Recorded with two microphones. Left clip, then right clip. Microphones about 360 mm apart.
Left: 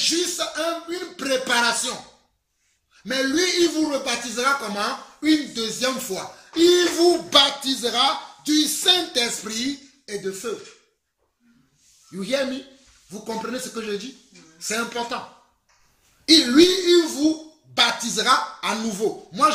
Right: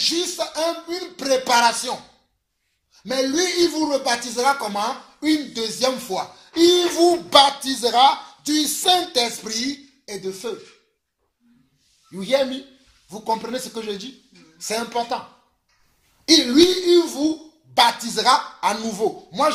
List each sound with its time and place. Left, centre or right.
0.0 s speech: centre
3.0 s speech: centre
12.2 s speech: centre
13.5 s speech: centre
16.3 s speech: centre